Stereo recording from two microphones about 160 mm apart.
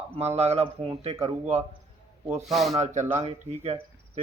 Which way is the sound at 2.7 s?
45° right (ahead or behind).